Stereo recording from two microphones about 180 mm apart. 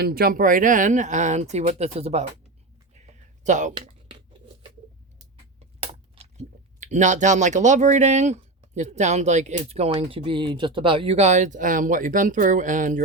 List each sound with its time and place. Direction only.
0.0 s speech: 55° right (ahead or behind); by 2.2 s 35° right (ahead or behind)
3.4 s speech: 45° right (ahead or behind)
5.5 s speech: 35° right (ahead or behind)